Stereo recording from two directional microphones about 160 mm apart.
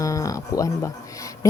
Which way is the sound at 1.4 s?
20° left (ahead or behind).